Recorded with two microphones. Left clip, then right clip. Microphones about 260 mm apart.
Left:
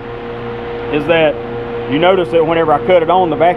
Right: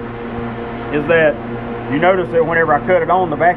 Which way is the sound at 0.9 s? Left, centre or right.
Left.